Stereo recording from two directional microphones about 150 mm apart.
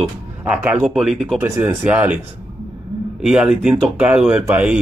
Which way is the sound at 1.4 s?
15° right (ahead or behind).